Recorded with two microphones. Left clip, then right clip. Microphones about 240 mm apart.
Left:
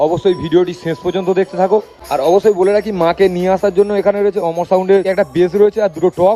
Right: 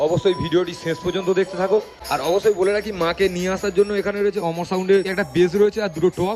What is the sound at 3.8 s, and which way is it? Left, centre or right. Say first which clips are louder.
Speech: left 7 dB; left.